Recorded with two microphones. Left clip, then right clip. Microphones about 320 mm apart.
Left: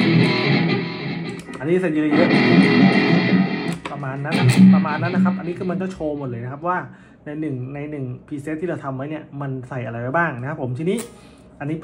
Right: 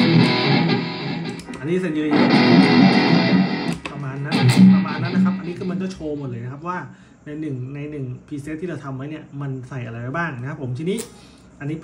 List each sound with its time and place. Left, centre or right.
0.0 s music: right
1.6 s speech: centre
2.0 s music: right
3.7 s music: centre
4.3 s speech: right
4.7 s speech: centre
7.2 s speech: centre